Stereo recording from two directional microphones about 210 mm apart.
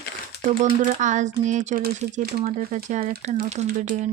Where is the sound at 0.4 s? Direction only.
35° right (ahead or behind).